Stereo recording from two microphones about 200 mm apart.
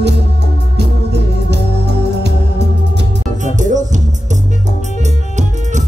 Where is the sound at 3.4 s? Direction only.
40° right (ahead or behind).